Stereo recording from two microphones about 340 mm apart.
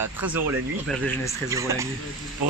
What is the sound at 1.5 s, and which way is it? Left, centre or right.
Speech, centre.